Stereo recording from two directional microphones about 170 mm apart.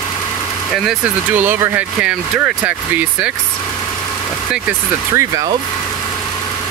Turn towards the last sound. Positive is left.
turn(degrees=-15)  # may be behind; listen again after turning